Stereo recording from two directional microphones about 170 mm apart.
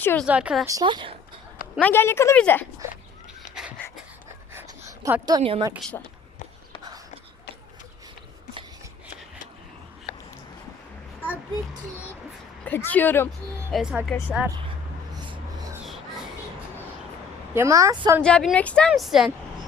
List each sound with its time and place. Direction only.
0.0 s speech: 10° left (ahead or behind)
0.3 s a woman's voice: 5° right (ahead or behind)
0.7 s speech: 25° right (ahead or behind)
1.8 s speech: 15° left (ahead or behind)
3.5 s dog: 5° right (ahead or behind)
4.9 s a woman's voice: 20° right (ahead or behind)
5.4 s a woman's voice: 30° right (ahead or behind)
12.6 s speech: 10° left (ahead or behind)
13.7 s speech: centre (ahead or behind)
14.1 s speech: 10° left (ahead or behind)
15.1 s a sound: 25° right (ahead or behind)
17.5 s a woman's voice: 15° right (ahead or behind)
18.2 s speech: 5° left (ahead or behind)